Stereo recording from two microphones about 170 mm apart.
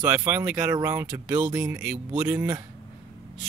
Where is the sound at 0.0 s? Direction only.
10° right (ahead or behind).